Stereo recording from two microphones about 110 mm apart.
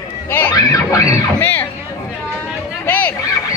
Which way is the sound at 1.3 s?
15° left (ahead or behind).